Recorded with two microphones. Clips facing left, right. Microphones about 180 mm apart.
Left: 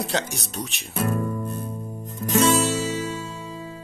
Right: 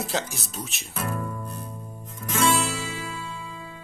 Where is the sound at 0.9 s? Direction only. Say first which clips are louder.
Left 6 dB; 35° left (ahead or behind).